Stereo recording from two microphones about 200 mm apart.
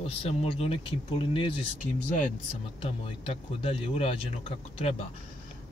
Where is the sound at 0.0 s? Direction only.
30° left (ahead or behind).